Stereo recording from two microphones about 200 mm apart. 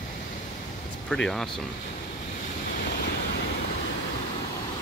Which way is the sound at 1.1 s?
5° left (ahead or behind).